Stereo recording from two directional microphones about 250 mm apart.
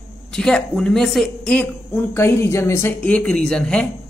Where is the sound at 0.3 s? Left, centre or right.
Centre.